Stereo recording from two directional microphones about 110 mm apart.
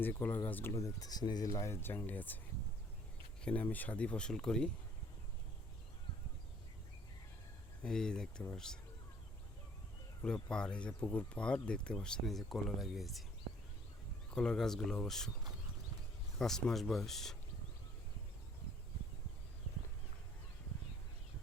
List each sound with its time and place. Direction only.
0.0 s speech: 15° left (ahead or behind)
0.7 s speech: 30° left (ahead or behind); by 2.4 s 15° left (ahead or behind)
3.4 s speech: 15° left (ahead or behind)
7.8 s speech: 5° left (ahead or behind)
10.2 s speech: 5° left (ahead or behind)
14.3 s speech: 5° left (ahead or behind)
16.4 s speech: 5° left (ahead or behind)